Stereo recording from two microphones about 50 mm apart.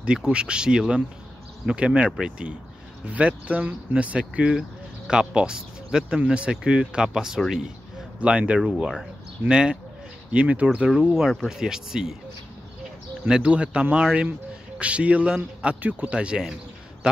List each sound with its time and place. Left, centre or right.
0.0 s speech: centre
7.3 s speech: centre
8.2 s speech: right
10.3 s speech: right
11.1 s speech: centre
13.3 s speech: right
15.8 s speech: right
16.1 s speech: right